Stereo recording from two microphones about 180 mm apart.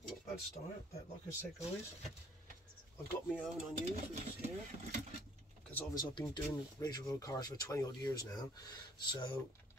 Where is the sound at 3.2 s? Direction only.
Centre (ahead or behind).